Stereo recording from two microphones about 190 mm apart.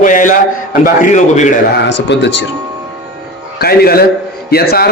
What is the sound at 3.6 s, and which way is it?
A man's voice, 55° left (ahead or behind).